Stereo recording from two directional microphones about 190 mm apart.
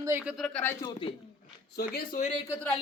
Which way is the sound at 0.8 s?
30° left (ahead or behind).